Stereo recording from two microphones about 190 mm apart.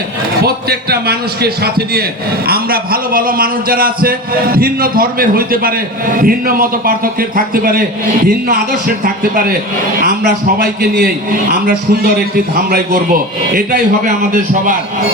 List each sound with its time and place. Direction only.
0.4 s a man's voice: 55° right (ahead or behind)